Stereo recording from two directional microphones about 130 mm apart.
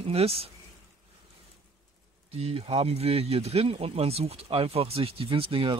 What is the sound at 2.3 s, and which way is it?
Speech, 50° right (ahead or behind).